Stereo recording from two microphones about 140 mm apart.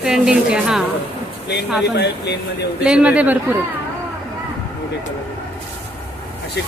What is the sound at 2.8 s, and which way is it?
Speech, 10° right (ahead or behind).